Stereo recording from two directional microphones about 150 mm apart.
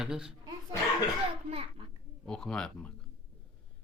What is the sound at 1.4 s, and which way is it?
Speech, 40° right (ahead or behind).